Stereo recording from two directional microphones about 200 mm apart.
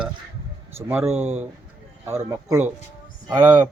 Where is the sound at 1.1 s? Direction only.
35° right (ahead or behind).